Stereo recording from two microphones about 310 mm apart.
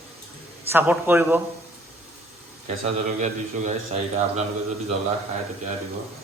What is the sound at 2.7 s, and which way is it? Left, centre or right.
A man's voice, right.